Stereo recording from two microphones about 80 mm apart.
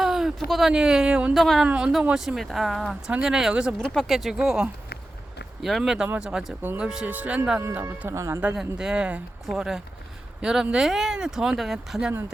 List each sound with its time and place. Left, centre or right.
0.0 s a sound: centre
0.4 s speech: centre
1.6 s speech: centre
2.1 s speech: centre
3.1 s speech: centre
3.9 s speech: centre
4.4 s speech: centre
7.6 s speech: right
8.5 s speech: centre